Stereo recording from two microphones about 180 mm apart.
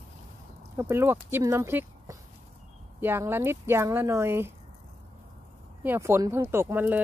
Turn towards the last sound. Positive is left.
turn(degrees=-10)  # may be behind; listen again after turning